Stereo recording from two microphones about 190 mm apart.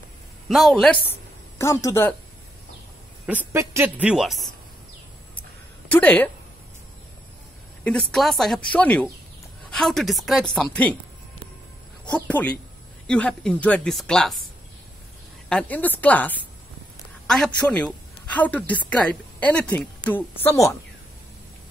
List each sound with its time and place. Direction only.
0.5 s a woman's voice: centre (ahead or behind)
1.6 s a woman's voice: 15° left (ahead or behind)
3.3 s speech: 10° right (ahead or behind)
5.9 s a woman's voice: 10° left (ahead or behind)
8.1 s a woman's voice: centre (ahead or behind)
12.3 s a woman's voice: 10° left (ahead or behind)
15.4 s a woman's voice: 5° left (ahead or behind)